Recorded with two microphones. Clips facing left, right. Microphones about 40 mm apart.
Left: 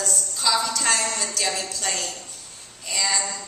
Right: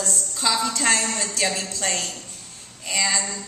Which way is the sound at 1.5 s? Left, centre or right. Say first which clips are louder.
Right 1 dB; right.